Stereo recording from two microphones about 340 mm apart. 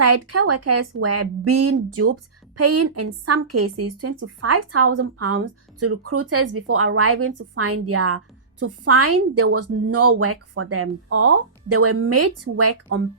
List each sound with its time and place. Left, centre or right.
0.0 s a woman's voice: right